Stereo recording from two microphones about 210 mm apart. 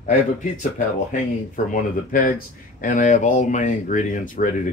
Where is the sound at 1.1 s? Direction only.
40° left (ahead or behind).